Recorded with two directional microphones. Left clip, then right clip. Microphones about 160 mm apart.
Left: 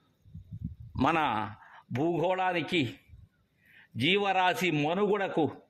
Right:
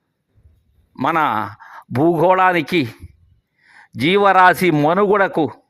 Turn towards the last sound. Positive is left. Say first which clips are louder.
# right 13 dB
turn(degrees=-55)  # may be behind; listen again after turning